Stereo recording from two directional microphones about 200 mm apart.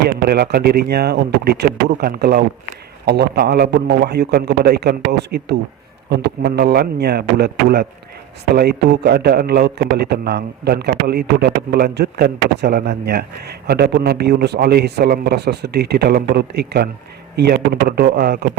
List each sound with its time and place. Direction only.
0.3 s a man's voice: 50° right (ahead or behind)